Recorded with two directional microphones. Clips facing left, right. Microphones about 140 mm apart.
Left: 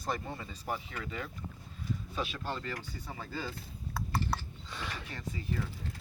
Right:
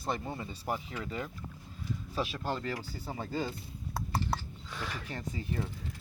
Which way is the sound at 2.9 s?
30° right (ahead or behind).